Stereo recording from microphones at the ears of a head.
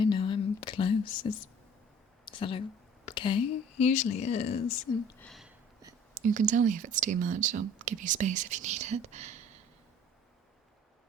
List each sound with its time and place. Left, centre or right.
0.2 s whispering: left
2.2 s a sound: left
3.1 s speech: left
6.1 s speech: right